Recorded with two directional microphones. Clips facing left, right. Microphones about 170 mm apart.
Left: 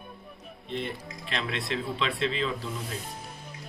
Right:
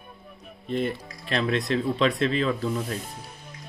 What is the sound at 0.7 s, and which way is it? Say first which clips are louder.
Speech: right 7 dB; 45° right (ahead or behind).